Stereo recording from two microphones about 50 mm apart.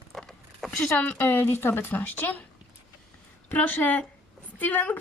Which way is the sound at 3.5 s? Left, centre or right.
Left.